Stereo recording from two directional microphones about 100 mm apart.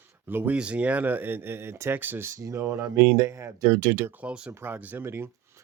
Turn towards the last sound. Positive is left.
turn(degrees=-25)  # may be behind; listen again after turning